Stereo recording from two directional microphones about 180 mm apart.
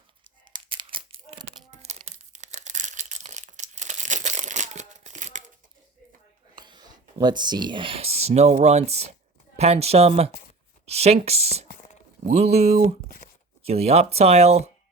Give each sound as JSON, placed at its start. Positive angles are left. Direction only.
{"t": 0.5, "sound": "crumpling", "side_deg": -25}
{"t": 6.6, "sound": "speech", "side_deg": -25}
{"t": 13.1, "sound": "a sound", "side_deg": 45}
{"t": 13.7, "sound": "speech", "side_deg": -35}